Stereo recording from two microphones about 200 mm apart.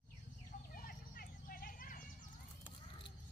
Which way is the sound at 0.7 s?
45° left (ahead or behind).